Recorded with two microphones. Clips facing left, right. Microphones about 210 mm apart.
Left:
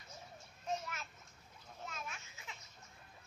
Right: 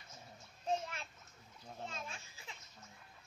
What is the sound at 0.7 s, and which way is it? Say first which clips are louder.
Children playing: right 3 dB; 30° right (ahead or behind).